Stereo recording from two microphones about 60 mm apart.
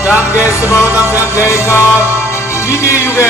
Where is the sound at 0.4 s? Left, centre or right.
Left.